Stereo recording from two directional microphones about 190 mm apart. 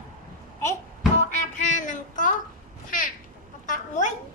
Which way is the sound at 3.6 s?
40° left (ahead or behind).